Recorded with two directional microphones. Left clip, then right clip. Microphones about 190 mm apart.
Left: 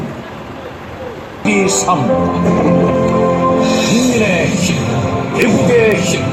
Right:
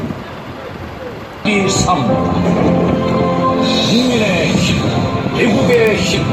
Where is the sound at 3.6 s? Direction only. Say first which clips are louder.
Left 1 dB; 20° left (ahead or behind).